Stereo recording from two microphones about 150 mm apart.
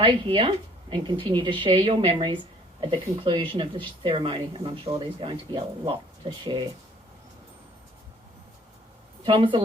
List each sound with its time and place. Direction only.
0.0 s speech: 35° right (ahead or behind)
9.2 s speech: 35° right (ahead or behind)